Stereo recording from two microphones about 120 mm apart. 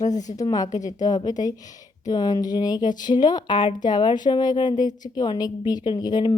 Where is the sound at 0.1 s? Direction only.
90° left.